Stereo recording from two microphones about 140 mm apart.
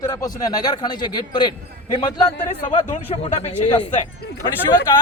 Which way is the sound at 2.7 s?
45° left (ahead or behind).